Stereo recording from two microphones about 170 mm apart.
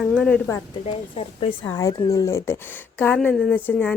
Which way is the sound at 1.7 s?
20° left (ahead or behind).